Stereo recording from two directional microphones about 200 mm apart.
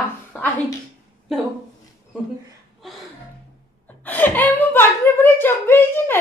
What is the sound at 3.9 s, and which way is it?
Speech, 10° left (ahead or behind).